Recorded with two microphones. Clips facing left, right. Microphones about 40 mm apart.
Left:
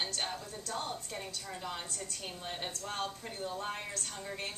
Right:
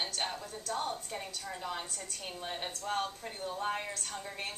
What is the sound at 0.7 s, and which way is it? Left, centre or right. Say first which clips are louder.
Speech: right 3 dB; centre.